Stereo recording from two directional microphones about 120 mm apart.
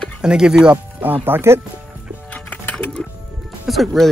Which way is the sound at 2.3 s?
10° left (ahead or behind).